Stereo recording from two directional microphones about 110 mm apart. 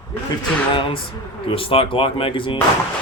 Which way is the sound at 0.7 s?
50° left (ahead or behind).